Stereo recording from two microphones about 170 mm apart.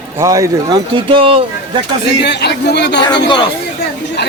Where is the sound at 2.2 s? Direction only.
80° left.